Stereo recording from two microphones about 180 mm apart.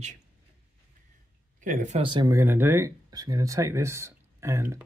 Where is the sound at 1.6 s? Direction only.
45° right (ahead or behind).